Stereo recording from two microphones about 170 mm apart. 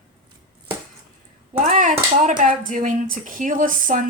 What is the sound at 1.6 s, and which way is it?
Speech, 45° right (ahead or behind).